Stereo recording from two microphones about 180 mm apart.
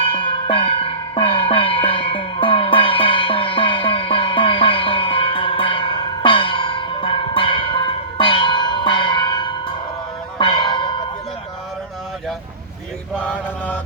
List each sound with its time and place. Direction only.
0.0 s music: 30° left (ahead or behind)
13.1 s mantra: 5° left (ahead or behind)